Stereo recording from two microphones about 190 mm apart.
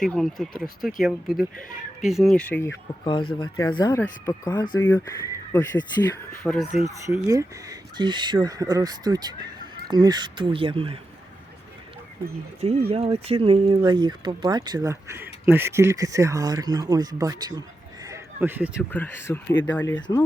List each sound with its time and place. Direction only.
0.0 s speech: centre (ahead or behind)
3.0 s speech: 25° left (ahead or behind)
6.4 s speech: centre (ahead or behind)
6.8 s speech: 15° right (ahead or behind)
12.9 s speech: 30° right (ahead or behind)
18.0 s a sound: 15° right (ahead or behind)
18.8 s speech: 10° left (ahead or behind)